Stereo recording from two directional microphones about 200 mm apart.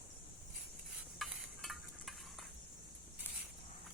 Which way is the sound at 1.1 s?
Centre (ahead or behind).